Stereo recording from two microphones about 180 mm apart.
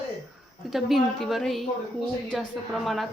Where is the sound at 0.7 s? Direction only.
Centre (ahead or behind).